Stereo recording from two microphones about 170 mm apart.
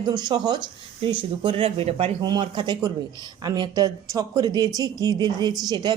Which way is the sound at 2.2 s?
25° right (ahead or behind).